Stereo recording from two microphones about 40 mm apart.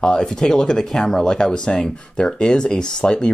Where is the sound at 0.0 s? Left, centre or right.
Centre.